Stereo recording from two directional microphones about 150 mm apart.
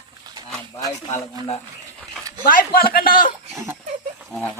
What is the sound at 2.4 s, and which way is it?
Speech, 75° left (ahead or behind).